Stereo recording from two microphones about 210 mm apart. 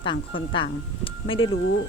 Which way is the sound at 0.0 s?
25° left (ahead or behind).